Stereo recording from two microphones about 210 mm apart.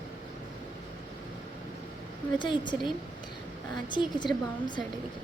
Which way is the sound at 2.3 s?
20° left (ahead or behind).